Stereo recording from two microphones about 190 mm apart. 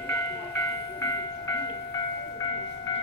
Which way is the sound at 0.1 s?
15° left (ahead or behind).